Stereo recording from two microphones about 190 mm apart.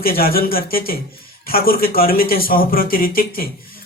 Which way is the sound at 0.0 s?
50° left (ahead or behind).